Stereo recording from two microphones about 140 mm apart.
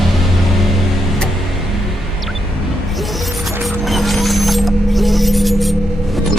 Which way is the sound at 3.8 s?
Centre (ahead or behind).